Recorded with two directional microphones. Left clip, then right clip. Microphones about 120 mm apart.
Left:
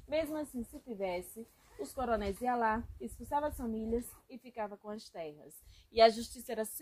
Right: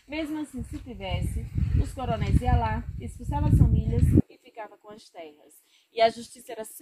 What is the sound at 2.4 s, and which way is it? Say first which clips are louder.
Speech: right 3 dB; 25° left (ahead or behind).